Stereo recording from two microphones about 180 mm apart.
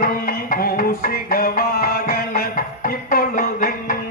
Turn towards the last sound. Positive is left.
turn(degrees=50)  # may be behind; listen again after turning